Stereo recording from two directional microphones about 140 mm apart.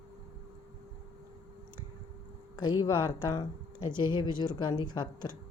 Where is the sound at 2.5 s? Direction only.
30° left (ahead or behind).